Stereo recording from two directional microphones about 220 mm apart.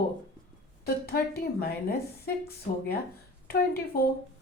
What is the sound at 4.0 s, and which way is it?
Speech, 45° left (ahead or behind).